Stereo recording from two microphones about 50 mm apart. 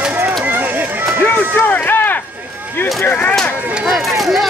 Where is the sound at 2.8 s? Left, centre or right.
Left.